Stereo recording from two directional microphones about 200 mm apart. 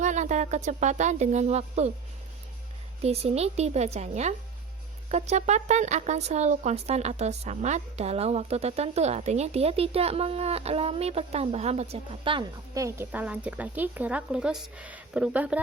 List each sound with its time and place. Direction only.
0.0 s speech: 35° right (ahead or behind)
3.0 s speech: 30° right (ahead or behind); by 15.6 s 5° right (ahead or behind)